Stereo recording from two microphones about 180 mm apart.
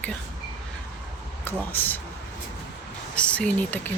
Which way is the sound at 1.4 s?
10° left (ahead or behind).